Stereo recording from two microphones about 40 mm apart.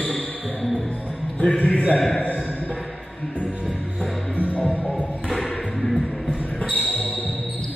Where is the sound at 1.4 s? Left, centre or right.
Left.